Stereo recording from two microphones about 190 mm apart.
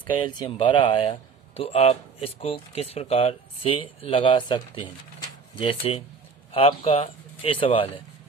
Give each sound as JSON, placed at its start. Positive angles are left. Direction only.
{"t": 0.0, "sound": "speech", "side_deg": 25}